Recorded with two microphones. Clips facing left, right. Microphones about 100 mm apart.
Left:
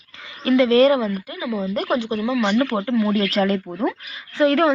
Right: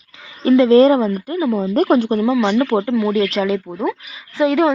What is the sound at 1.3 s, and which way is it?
Speech, 40° right (ahead or behind).